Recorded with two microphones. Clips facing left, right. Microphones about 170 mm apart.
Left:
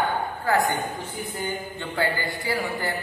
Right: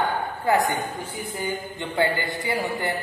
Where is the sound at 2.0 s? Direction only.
20° right (ahead or behind).